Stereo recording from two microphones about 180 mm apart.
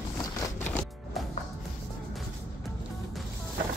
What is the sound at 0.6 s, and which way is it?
Music, 10° left (ahead or behind).